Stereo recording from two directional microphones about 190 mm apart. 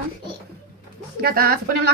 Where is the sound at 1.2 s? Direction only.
55° right (ahead or behind).